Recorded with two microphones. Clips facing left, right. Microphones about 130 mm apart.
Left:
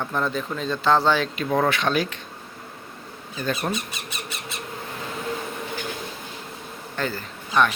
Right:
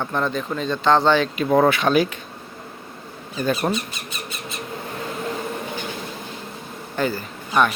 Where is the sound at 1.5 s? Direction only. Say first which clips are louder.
Right 5 dB; 15° right (ahead or behind).